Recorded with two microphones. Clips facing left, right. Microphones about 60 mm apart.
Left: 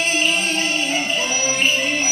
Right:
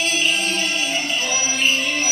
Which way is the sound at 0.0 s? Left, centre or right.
Left.